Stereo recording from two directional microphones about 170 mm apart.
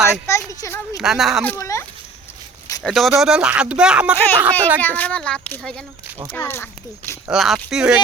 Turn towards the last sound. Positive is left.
turn(degrees=-5)  # may be behind; listen again after turning